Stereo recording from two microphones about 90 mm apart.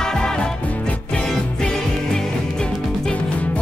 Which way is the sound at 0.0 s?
5° left (ahead or behind).